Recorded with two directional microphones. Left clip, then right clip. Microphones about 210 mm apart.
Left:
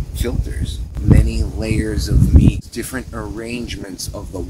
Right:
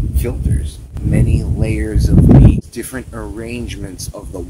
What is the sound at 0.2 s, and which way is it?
Speech, 15° right (ahead or behind).